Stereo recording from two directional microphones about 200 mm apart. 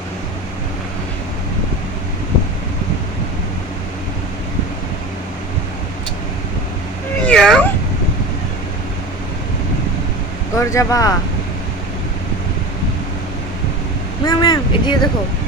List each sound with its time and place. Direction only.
7.2 s cat: 5° left (ahead or behind)
10.5 s speech: 15° left (ahead or behind)
14.3 s speech: 20° left (ahead or behind)